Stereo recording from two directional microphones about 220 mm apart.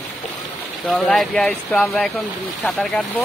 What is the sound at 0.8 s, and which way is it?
Speech, centre (ahead or behind).